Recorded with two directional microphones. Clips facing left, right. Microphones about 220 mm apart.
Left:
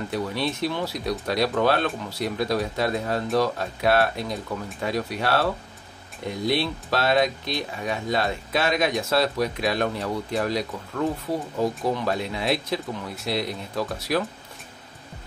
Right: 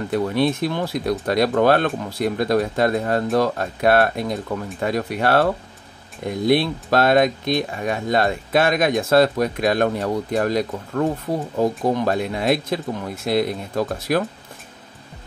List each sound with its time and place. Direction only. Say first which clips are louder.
0.1 s speech: right 9 dB; 50° right (ahead or behind)